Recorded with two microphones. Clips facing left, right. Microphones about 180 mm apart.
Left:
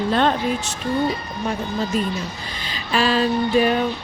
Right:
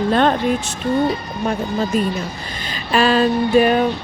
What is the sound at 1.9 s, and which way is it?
Speech, 55° right (ahead or behind).